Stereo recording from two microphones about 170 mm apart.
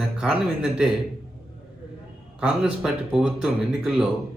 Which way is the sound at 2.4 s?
5° right (ahead or behind).